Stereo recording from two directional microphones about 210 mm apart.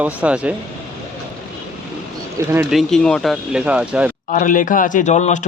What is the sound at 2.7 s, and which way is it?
Speech, centre (ahead or behind).